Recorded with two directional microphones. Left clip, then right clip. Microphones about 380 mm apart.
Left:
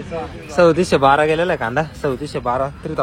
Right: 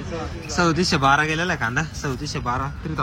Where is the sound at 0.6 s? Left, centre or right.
Centre.